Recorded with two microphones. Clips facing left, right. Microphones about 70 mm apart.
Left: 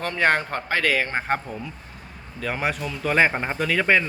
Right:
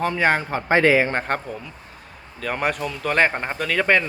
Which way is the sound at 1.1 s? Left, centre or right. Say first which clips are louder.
Right 1 dB; centre.